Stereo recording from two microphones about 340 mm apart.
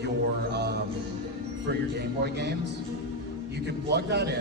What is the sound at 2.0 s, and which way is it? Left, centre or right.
Speech, right.